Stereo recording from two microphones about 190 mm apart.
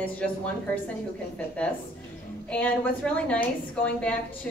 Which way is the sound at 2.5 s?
5° left (ahead or behind).